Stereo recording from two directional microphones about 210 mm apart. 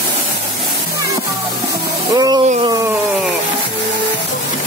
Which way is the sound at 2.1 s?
20° right (ahead or behind).